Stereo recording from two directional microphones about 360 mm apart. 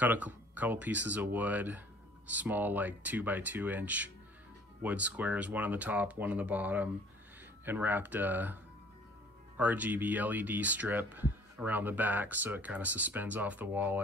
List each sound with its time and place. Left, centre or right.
0.0 s speech: centre
9.6 s speech: centre